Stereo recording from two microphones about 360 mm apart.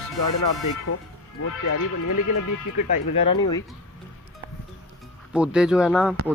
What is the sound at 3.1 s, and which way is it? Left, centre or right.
Speech, centre.